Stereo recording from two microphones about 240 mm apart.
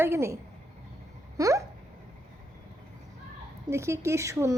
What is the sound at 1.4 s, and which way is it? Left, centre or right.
Speech, centre.